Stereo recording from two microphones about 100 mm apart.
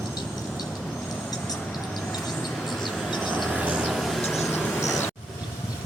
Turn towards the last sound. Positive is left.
turn(degrees=0)  # may be behind; listen again after turning